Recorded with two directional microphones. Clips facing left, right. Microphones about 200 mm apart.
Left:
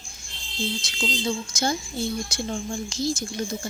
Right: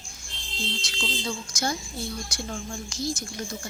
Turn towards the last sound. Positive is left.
turn(degrees=25)  # may be behind; listen again after turning